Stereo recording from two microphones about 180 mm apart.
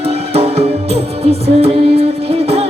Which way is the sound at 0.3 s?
35° right (ahead or behind).